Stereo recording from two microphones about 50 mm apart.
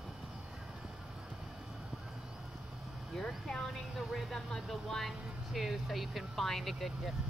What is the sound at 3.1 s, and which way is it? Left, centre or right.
Speech, centre.